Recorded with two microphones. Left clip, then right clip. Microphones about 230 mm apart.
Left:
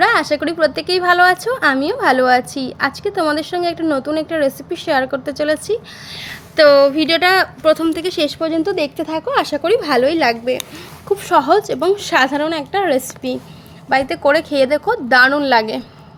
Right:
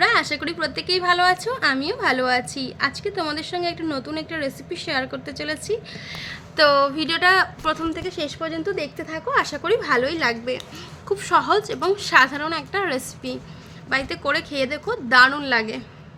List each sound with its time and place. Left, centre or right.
0.0 s a woman's voice: centre